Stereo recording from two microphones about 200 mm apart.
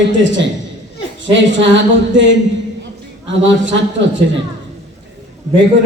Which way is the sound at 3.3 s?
65° right (ahead or behind).